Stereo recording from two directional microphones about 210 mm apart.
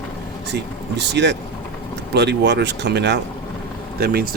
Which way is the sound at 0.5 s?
55° right (ahead or behind).